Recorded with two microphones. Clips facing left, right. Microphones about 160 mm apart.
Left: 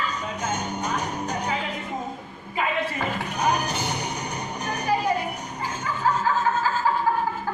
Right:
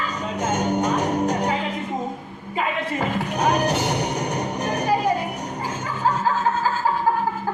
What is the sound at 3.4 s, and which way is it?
Music, 75° right (ahead or behind).